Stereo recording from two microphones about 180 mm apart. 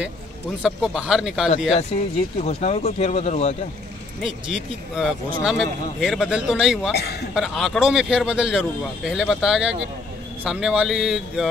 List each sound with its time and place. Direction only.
0.6 s speech: 5° right (ahead or behind)
2.4 s speech: 35° left (ahead or behind)
4.2 s speech: 5° right (ahead or behind)